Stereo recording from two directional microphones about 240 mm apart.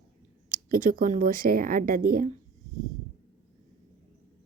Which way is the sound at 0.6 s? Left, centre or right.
Right.